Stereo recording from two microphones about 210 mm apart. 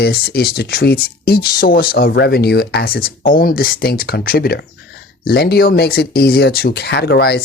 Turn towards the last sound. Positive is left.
turn(degrees=50)  # may be behind; listen again after turning